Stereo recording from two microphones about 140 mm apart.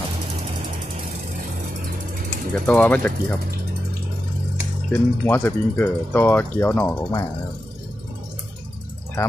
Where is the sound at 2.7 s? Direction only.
10° left (ahead or behind).